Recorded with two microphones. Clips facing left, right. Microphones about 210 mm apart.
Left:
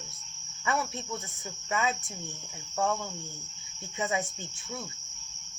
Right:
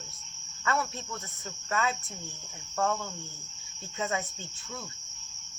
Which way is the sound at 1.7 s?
15° left (ahead or behind).